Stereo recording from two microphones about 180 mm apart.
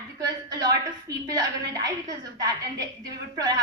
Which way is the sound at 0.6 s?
20° right (ahead or behind).